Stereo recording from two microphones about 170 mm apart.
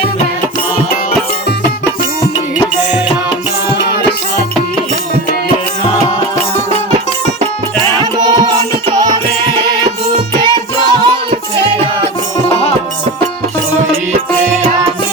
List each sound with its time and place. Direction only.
8.2 s music: 25° right (ahead or behind)
10.4 s music: 25° right (ahead or behind)